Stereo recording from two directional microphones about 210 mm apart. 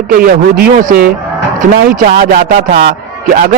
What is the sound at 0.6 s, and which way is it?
Speech, 45° right (ahead or behind).